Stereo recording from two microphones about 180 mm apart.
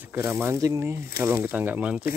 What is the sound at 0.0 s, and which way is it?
Speech, 10° right (ahead or behind).